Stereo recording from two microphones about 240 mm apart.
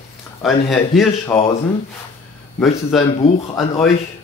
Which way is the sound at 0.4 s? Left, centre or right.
Centre.